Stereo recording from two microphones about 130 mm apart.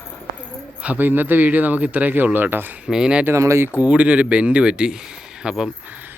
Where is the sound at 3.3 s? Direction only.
20° right (ahead or behind).